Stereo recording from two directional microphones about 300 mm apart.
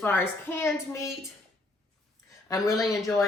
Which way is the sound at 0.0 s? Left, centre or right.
Centre.